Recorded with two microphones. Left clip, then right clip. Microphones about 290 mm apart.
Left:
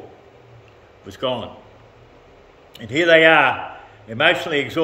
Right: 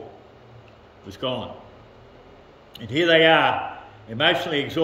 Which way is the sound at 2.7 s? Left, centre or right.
Centre.